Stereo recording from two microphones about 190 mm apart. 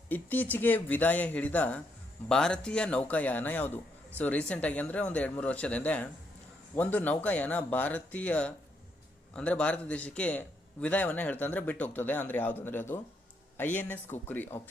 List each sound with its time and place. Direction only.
0.1 s a man's voice: 10° left (ahead or behind)